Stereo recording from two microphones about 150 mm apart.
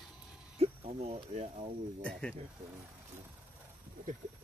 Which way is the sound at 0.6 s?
40° right (ahead or behind).